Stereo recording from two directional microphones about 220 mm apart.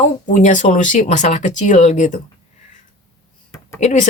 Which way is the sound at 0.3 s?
35° left (ahead or behind).